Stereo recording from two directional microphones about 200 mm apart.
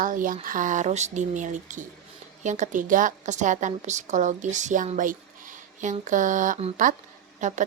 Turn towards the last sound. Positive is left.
turn(degrees=-40)  # may be behind; listen again after turning